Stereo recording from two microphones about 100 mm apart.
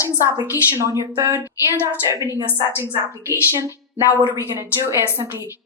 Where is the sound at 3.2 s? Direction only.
30° right (ahead or behind).